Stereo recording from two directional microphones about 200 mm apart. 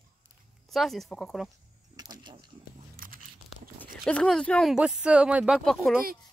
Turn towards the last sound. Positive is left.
turn(degrees=0)  # may be behind; listen again after turning